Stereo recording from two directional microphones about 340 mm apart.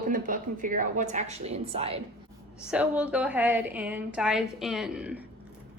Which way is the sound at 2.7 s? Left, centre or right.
Centre.